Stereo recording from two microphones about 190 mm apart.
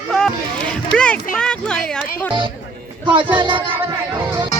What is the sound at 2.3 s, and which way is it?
Music, 25° right (ahead or behind).